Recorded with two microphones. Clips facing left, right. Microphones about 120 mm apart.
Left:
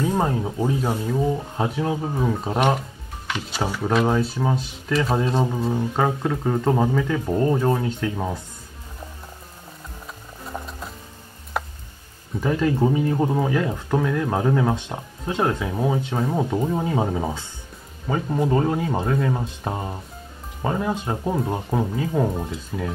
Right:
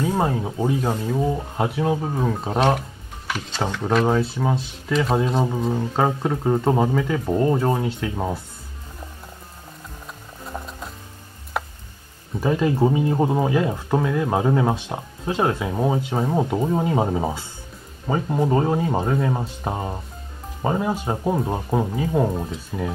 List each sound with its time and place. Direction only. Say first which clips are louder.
0.0 s speech: even; 10° right (ahead or behind)
2.2 s speech: right 1 dB; centre (ahead or behind)
10.4 s music: even; centre (ahead or behind)
11.6 s tick: even; centre (ahead or behind)
12.4 s speech: right 1 dB; 15° right (ahead or behind)